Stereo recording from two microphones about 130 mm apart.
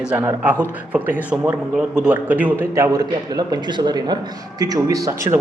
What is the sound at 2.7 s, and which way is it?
A man's voice, 25° right (ahead or behind).